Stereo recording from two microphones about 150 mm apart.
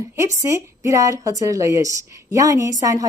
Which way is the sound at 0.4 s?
20° right (ahead or behind).